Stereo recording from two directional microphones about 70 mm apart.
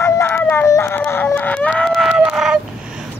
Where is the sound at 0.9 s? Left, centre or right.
Left.